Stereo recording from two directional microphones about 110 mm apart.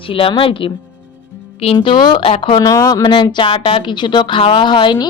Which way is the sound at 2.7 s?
30° left (ahead or behind).